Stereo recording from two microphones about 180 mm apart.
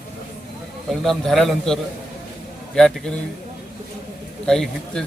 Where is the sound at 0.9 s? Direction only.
Centre (ahead or behind).